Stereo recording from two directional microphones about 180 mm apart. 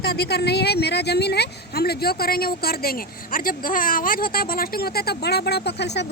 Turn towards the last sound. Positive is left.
turn(degrees=70)  # may be behind; listen again after turning